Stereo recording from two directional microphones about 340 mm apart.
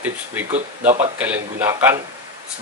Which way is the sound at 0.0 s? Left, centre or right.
Centre.